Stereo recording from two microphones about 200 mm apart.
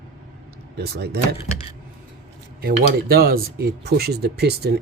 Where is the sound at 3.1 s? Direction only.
50° right (ahead or behind).